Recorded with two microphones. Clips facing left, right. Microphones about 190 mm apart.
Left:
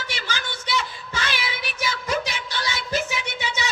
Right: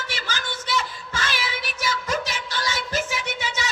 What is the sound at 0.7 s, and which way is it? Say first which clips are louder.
Music: even; 45° right (ahead or behind).